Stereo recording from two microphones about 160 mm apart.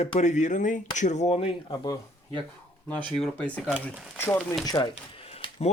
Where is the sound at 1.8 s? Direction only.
25° left (ahead or behind).